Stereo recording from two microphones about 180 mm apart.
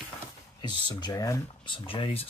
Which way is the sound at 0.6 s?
25° left (ahead or behind).